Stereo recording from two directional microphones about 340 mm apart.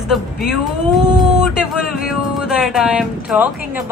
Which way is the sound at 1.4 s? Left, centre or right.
Centre.